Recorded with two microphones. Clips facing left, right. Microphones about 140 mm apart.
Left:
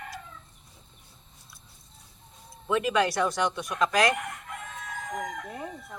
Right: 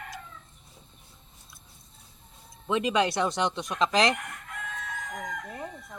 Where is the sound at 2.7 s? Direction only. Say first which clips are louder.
Even; 20° right (ahead or behind).